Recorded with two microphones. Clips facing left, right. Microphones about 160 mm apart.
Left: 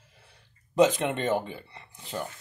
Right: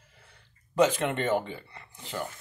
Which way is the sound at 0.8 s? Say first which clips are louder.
Left 2 dB; 15° left (ahead or behind).